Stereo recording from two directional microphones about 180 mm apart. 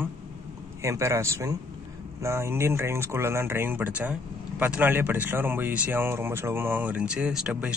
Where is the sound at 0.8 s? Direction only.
15° right (ahead or behind).